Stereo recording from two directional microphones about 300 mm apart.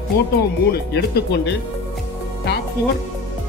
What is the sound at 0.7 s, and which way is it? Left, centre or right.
Speech, left.